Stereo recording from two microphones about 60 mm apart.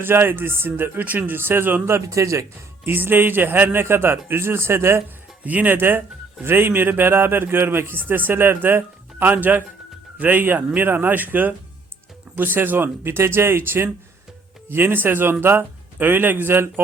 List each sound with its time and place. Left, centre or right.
0.0 s a man's voice: right
1.8 s a man's voice: right
2.8 s a man's voice: right
5.5 s a man's voice: right